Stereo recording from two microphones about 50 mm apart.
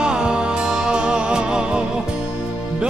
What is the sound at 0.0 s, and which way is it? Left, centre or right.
Music, centre.